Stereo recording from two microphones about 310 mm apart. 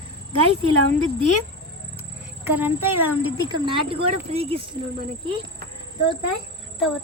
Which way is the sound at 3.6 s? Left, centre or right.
Centre.